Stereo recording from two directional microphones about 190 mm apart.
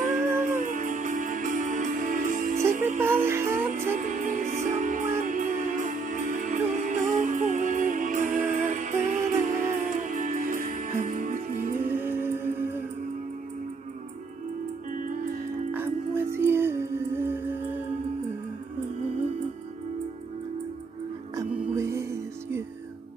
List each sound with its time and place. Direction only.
0.0 s music: 40° right (ahead or behind)
3.0 s music: 10° right (ahead or behind)
4.0 s music: 40° right (ahead or behind)
12.0 s music: 10° right (ahead or behind)
14.9 s music: 45° right (ahead or behind)
15.7 s music: 10° right (ahead or behind)
21.4 s music: 15° right (ahead or behind)